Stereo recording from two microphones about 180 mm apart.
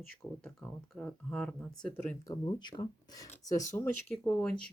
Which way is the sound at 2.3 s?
25° left (ahead or behind).